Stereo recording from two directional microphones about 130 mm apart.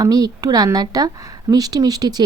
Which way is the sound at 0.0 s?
30° right (ahead or behind).